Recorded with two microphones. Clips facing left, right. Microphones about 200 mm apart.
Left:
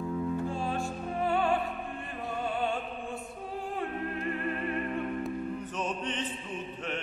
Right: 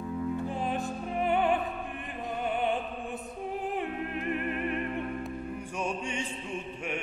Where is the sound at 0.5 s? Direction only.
20° right (ahead or behind).